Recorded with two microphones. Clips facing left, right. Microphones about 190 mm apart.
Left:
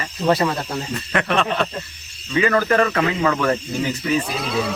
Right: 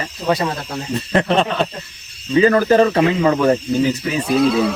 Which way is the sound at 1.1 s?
30° right (ahead or behind).